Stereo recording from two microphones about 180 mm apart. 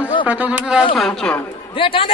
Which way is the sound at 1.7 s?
30° left (ahead or behind).